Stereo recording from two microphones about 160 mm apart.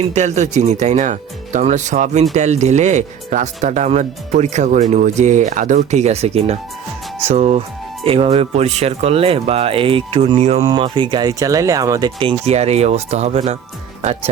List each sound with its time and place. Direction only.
0.1 s speech: 45° right (ahead or behind)
10.7 s speech: 30° right (ahead or behind)